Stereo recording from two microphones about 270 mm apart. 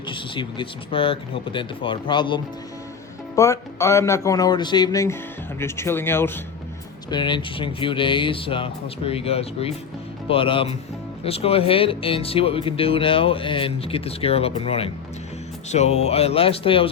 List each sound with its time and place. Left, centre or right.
0.1 s speech: centre